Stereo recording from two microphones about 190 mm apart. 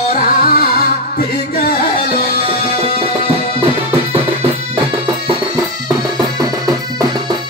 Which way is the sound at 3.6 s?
30° right (ahead or behind).